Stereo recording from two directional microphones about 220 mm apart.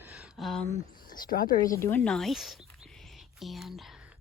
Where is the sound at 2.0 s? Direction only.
Centre (ahead or behind).